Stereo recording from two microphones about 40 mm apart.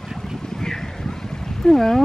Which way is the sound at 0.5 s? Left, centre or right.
Centre.